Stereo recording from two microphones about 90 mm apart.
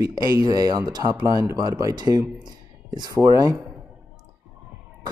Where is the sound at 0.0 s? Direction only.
45° right (ahead or behind).